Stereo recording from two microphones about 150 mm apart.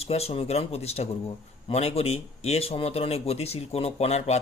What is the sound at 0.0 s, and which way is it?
Speech, 45° left (ahead or behind).